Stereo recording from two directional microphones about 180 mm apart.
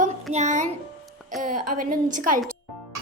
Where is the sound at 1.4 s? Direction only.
50° right (ahead or behind).